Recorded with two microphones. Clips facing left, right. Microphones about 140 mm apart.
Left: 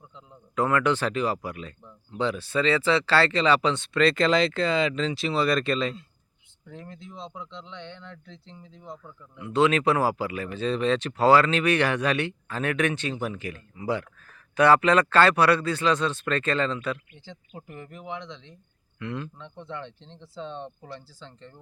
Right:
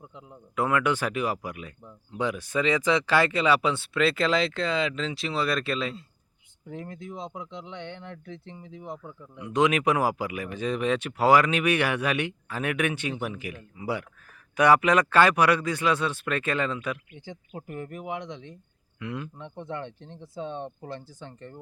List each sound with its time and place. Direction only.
0.5 s speech: 10° right (ahead or behind)
6.7 s speech: 55° right (ahead or behind)
9.0 s speech: 15° right (ahead or behind)
17.7 s speech: 50° right (ahead or behind)
18.9 s speech: 10° right (ahead or behind)
19.7 s speech: 50° right (ahead or behind)
20.1 s speech: 15° right (ahead or behind)
20.8 s speech: 50° right (ahead or behind)